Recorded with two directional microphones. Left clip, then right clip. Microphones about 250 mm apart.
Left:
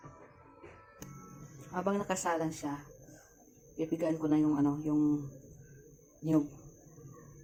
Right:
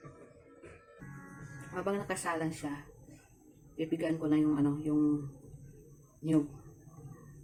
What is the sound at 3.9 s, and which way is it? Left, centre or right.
Speech, centre.